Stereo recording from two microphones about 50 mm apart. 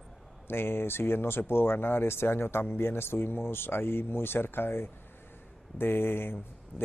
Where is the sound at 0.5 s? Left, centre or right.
Left.